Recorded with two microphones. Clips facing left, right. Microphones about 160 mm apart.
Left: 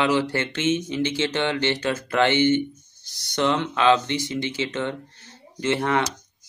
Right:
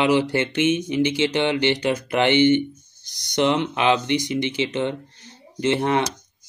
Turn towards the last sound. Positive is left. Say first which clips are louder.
# right 2 dB
turn(degrees=-20)  # may be behind; listen again after turning